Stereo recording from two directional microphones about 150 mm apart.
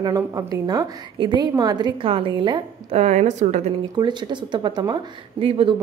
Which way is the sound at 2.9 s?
50° right (ahead or behind).